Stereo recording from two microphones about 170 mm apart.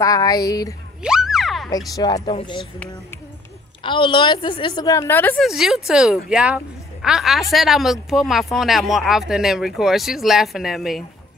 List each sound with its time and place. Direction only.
0.0 s a woman's voice: 20° left (ahead or behind)
1.0 s boing: 5° right (ahead or behind)
2.0 s a woman's voice: 25° left (ahead or behind)
3.8 s a woman's voice: 30° left (ahead or behind); by 5.4 s 10° left (ahead or behind)
5.4 s a woman's voice: centre (ahead or behind)